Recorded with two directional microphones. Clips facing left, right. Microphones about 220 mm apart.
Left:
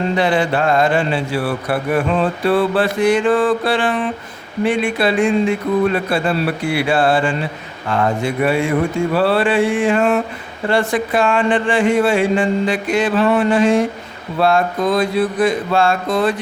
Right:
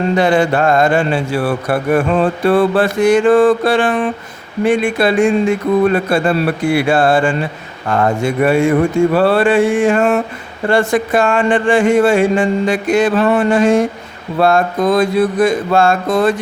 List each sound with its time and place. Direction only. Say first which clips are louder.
0.2 s speech: right 4 dB; 45° right (ahead or behind)